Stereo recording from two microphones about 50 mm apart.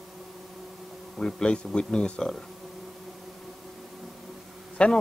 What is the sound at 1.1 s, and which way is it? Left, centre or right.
A man's voice, centre.